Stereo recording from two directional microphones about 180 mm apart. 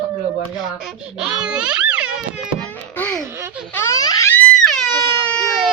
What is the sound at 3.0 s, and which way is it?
Laughter, 10° left (ahead or behind).